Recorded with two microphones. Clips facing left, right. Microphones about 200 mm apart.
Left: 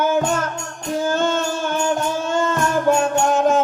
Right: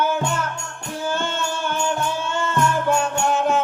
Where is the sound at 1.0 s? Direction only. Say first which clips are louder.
Left 4 dB; 40° left (ahead or behind).